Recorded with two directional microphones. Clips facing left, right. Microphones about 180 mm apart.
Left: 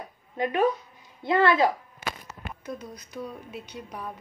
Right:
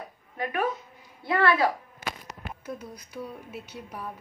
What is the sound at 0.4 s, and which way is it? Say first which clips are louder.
A woman's voice: left 5 dB; 25° left (ahead or behind).